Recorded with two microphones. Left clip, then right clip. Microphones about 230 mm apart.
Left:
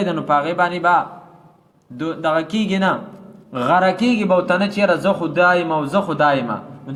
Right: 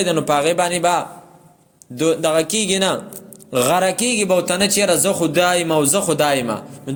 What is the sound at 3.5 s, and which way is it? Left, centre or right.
A man's voice, right.